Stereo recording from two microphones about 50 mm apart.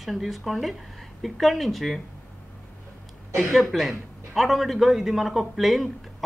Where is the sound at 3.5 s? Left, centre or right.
Centre.